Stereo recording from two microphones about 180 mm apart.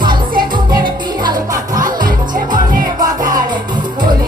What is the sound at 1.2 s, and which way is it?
Music, 25° right (ahead or behind).